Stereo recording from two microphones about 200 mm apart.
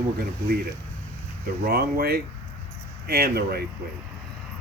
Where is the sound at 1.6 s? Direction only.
50° right (ahead or behind).